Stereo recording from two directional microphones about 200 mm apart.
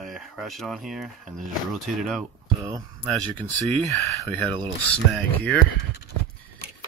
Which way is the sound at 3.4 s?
25° right (ahead or behind).